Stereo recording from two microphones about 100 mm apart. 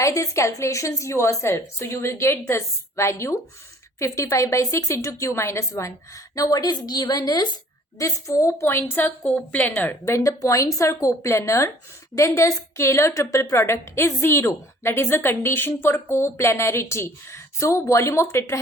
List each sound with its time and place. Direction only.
0.0 s a woman's voice: 30° left (ahead or behind)
10.2 s a woman's voice: 35° left (ahead or behind)